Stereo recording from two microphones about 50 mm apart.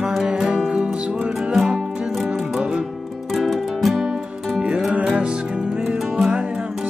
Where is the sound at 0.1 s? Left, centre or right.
Centre.